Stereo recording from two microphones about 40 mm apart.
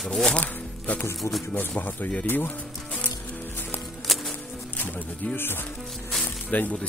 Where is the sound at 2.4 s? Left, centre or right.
Left.